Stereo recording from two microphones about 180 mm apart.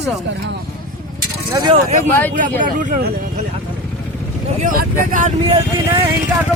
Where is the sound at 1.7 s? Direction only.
40° right (ahead or behind).